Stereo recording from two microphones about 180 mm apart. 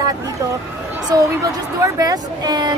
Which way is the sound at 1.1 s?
20° right (ahead or behind).